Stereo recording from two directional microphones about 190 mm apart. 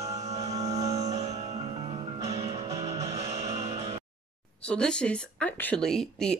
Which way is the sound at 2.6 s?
15° right (ahead or behind).